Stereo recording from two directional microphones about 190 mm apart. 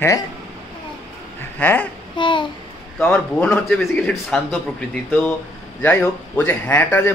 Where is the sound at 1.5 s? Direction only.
10° left (ahead or behind).